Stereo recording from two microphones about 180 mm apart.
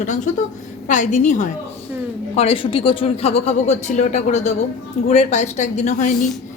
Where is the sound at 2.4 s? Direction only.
30° left (ahead or behind).